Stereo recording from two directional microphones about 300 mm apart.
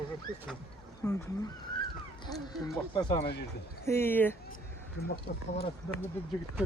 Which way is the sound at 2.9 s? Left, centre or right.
Centre.